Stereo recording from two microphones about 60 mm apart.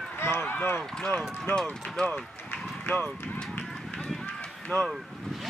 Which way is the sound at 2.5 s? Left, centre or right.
Left.